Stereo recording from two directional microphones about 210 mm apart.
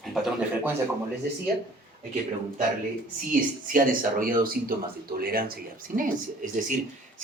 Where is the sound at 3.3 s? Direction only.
40° right (ahead or behind).